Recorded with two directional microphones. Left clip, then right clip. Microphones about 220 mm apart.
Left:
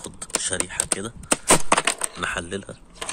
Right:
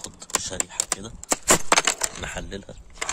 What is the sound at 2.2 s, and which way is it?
Speech, 5° right (ahead or behind).